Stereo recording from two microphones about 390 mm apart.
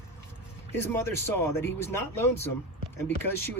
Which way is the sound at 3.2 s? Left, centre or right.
Left.